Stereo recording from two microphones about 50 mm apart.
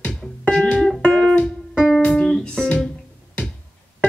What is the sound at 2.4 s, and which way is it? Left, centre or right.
Guitar, centre.